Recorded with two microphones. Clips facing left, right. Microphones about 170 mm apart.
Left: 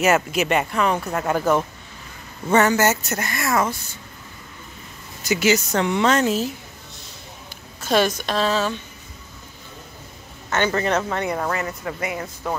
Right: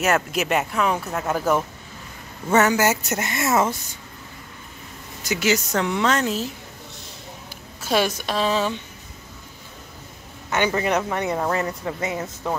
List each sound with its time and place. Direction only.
0.0 s a woman's voice: centre (ahead or behind)
3.2 s speech: 20° right (ahead or behind)
5.2 s speech: centre (ahead or behind)
7.8 s a woman's voice: 10° right (ahead or behind)
10.5 s a woman's voice: 15° right (ahead or behind)
11.5 s speech: 30° right (ahead or behind)